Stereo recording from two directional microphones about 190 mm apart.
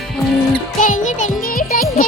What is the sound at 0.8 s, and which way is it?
Music, 40° left (ahead or behind).